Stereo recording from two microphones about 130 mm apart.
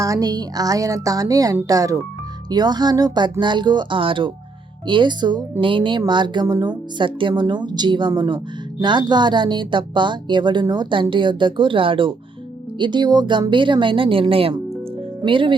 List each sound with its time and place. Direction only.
0.0 s a woman's voice: 25° right (ahead or behind)